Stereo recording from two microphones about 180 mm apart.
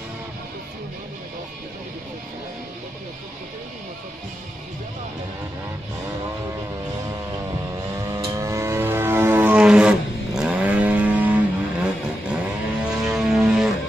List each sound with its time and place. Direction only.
7.9 s vehicle: 20° right (ahead or behind)
13.1 s music: centre (ahead or behind)